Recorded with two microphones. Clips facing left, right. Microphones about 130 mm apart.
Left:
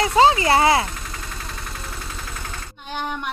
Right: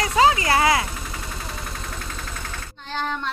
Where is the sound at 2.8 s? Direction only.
15° left (ahead or behind).